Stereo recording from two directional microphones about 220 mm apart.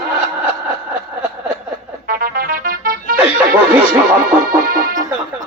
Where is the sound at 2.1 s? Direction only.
40° right (ahead or behind).